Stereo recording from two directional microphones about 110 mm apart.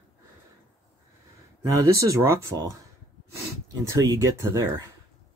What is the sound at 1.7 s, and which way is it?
Speech, 30° right (ahead or behind).